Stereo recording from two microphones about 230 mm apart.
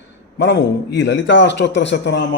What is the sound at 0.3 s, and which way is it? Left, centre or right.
A man's voice, left.